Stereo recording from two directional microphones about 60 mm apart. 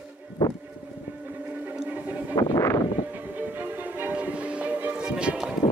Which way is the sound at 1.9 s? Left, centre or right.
Right.